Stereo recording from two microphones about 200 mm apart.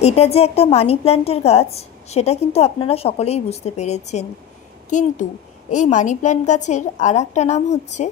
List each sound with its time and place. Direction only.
0.0 s a woman's voice: 30° left (ahead or behind)